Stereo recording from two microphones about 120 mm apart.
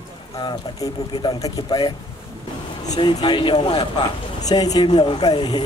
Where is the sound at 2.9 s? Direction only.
40° left (ahead or behind).